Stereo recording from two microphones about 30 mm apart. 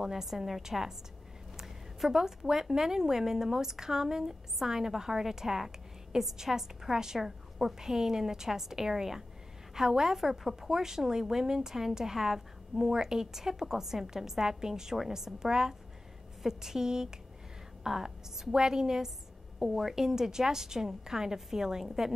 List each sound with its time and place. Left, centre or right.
0.0 s a woman's voice: centre
19.7 s a woman's voice: centre